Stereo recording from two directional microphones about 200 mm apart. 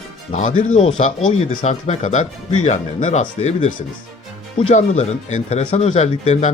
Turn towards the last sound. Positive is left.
turn(degrees=35)  # may be behind; listen again after turning